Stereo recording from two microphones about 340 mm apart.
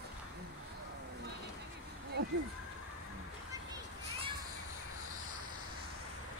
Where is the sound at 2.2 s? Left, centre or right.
Right.